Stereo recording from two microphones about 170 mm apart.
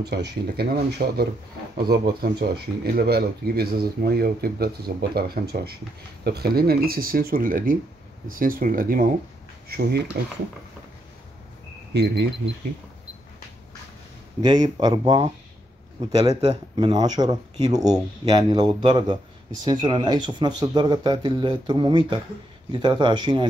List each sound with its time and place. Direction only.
0.0 s speech: 75° right (ahead or behind); by 9.1 s 55° right (ahead or behind)
9.7 s speech: 70° right (ahead or behind)
11.9 s speech: 80° right
14.4 s speech: 25° right (ahead or behind)